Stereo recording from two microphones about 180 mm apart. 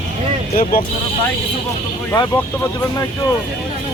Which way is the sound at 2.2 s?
25° left (ahead or behind).